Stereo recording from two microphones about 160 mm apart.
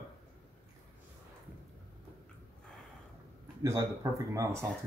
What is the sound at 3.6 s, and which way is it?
Speech, 20° right (ahead or behind).